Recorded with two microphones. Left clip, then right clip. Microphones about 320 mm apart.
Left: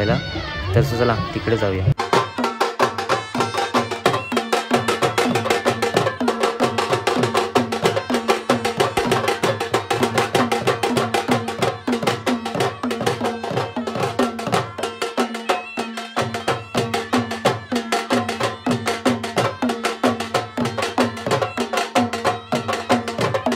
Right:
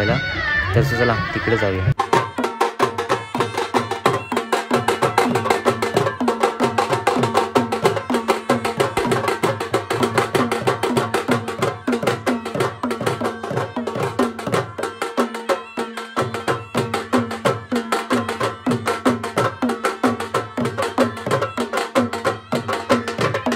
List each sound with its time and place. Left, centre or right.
0.0 s speech: centre
4.0 s music: centre
14.1 s music: centre